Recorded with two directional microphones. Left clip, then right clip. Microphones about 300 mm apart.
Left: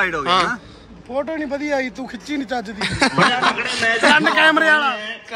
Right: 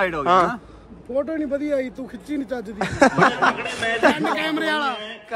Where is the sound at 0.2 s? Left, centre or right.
Centre.